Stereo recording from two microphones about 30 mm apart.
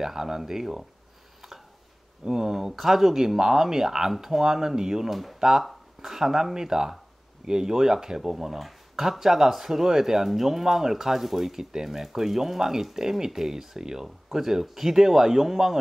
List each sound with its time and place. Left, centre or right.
0.0 s speech: centre
2.2 s speech: centre